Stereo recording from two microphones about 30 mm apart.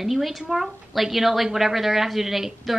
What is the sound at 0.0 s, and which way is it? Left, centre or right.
A woman's voice, centre.